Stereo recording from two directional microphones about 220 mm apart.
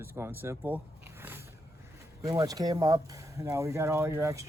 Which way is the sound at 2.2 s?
15° right (ahead or behind).